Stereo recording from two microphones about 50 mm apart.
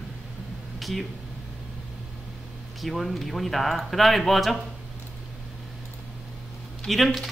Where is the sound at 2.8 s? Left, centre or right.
Centre.